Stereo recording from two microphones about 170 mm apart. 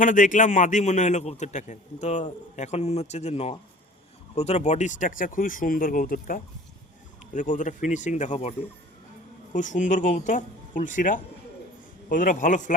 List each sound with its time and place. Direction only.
0.0 s a man's voice: 50° left (ahead or behind)